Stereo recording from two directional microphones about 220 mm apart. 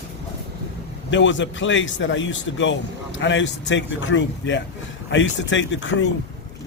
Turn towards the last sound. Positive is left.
turn(degrees=55)  # may be behind; listen again after turning